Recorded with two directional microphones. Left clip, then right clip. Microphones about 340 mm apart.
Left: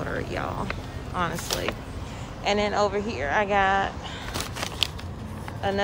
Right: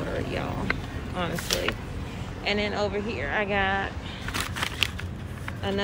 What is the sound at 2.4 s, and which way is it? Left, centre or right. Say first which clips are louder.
Speech: left 4 dB; centre.